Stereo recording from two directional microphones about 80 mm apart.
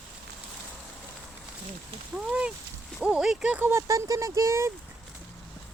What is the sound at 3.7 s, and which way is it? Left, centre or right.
Speech, right.